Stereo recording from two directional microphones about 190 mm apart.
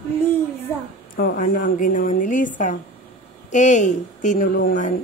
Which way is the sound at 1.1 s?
45° left (ahead or behind).